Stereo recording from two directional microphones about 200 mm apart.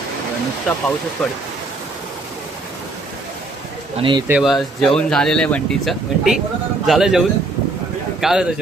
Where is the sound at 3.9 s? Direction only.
25° right (ahead or behind).